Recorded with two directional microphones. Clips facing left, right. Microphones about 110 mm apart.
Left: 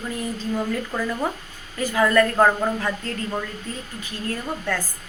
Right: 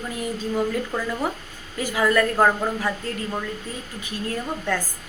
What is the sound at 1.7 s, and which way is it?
Speech, 10° right (ahead or behind).